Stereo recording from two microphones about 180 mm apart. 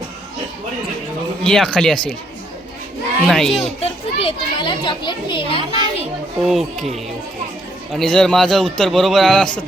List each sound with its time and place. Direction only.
1.5 s a man's voice: 5° left (ahead or behind)
3.2 s a man's voice: centre (ahead or behind)
3.8 s a child's voice: 30° left (ahead or behind)
6.4 s a man's voice: centre (ahead or behind)
7.9 s a man's voice: 5° left (ahead or behind)